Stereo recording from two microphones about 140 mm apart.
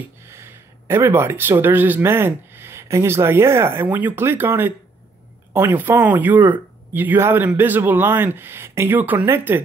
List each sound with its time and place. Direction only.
0.2 s speech: 20° right (ahead or behind)